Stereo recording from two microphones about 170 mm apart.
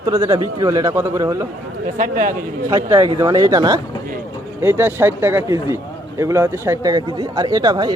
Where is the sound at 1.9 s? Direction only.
50° right (ahead or behind).